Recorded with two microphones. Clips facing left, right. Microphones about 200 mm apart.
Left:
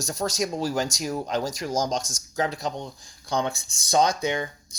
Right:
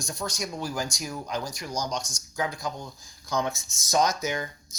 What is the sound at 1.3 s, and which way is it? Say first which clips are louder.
Speech: left 5 dB; 90° left.